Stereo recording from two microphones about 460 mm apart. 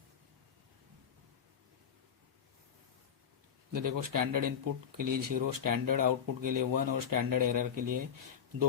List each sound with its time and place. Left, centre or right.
3.7 s speech: right